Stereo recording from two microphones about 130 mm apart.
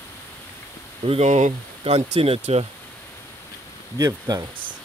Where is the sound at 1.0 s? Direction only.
55° right (ahead or behind).